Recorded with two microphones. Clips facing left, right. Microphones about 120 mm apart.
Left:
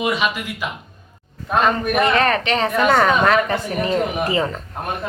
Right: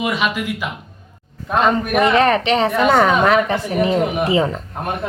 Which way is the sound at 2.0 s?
20° right (ahead or behind).